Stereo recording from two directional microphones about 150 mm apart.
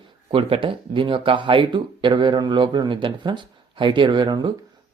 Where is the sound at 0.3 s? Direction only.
40° right (ahead or behind).